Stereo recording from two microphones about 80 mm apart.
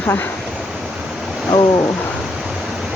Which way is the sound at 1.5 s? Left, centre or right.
Left.